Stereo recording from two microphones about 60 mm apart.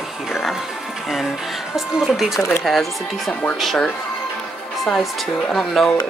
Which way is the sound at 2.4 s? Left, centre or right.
Left.